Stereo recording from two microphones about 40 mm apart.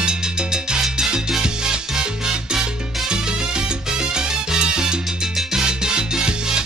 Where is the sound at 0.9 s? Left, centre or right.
Centre.